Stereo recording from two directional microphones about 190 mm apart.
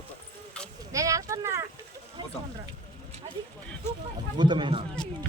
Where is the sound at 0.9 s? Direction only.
15° right (ahead or behind).